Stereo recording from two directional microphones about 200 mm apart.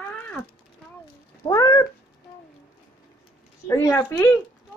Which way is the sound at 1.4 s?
20° left (ahead or behind).